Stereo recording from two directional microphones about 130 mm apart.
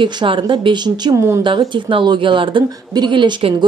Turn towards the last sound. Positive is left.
turn(degrees=-40)  # may be behind; listen again after turning